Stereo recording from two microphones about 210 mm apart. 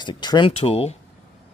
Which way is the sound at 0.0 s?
20° left (ahead or behind).